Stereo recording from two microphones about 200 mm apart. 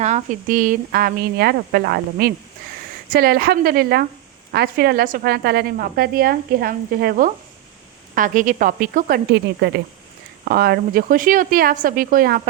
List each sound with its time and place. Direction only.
0.0 s a woman's voice: 35° right (ahead or behind)